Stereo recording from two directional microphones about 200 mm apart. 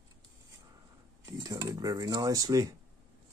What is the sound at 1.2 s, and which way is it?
Speech, 20° right (ahead or behind).